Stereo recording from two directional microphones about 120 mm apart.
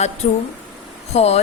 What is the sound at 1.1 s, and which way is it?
Speech, 65° left (ahead or behind).